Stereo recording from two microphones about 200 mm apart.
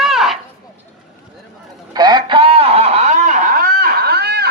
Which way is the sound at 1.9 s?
20° right (ahead or behind).